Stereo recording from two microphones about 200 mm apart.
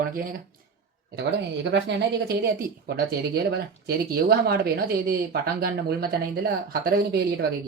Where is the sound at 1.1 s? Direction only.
60° right (ahead or behind).